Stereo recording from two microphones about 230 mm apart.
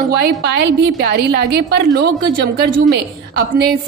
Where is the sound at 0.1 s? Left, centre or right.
Right.